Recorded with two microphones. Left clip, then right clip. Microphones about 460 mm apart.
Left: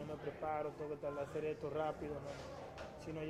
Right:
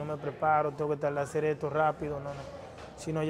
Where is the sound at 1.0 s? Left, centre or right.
Right.